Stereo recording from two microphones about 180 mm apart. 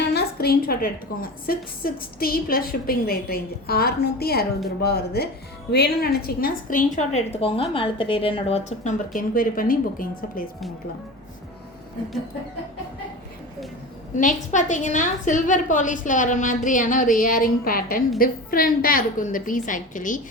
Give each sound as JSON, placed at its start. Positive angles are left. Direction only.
{"t": 0.1, "sound": "a woman's voice", "side_deg": 60}
{"t": 14.2, "sound": "a woman's voice", "side_deg": 45}